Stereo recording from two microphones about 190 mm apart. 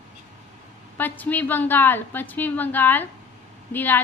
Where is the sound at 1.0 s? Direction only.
10° left (ahead or behind).